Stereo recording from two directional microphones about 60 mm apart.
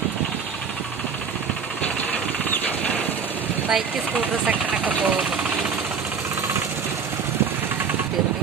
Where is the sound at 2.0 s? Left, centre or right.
Left.